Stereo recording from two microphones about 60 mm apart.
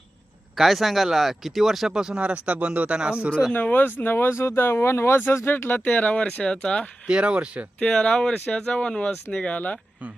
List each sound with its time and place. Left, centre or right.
0.5 s speech: centre
3.5 s speech: left
5.8 s speech: left
7.1 s speech: centre
7.8 s speech: centre